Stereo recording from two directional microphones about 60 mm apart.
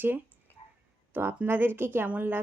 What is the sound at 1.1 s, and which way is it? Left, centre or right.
Speech, right.